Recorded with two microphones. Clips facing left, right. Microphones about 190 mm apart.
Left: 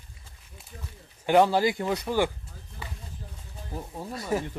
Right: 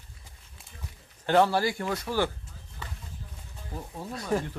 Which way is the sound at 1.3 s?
15° left (ahead or behind).